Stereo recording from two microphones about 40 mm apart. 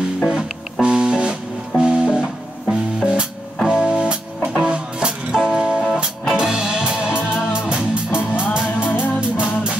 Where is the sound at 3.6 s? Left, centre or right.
Centre.